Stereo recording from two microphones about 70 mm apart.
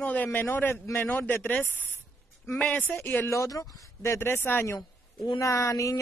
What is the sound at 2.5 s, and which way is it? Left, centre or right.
Speech, centre.